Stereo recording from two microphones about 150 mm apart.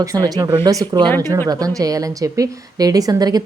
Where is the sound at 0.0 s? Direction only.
25° right (ahead or behind).